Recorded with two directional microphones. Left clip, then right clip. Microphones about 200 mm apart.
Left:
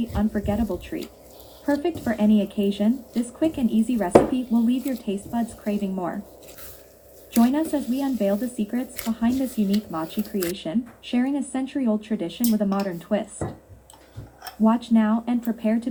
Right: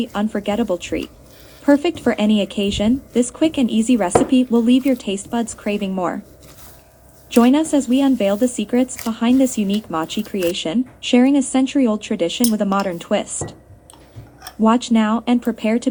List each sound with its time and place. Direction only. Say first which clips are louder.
0.1 s speech: right 5 dB; 60° right (ahead or behind)
7.3 s speech: right 7 dB; 60° right (ahead or behind)
14.6 s speech: right 5 dB; 60° right (ahead or behind)